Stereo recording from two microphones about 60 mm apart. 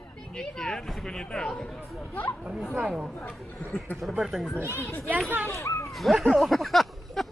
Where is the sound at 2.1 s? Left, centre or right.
Left.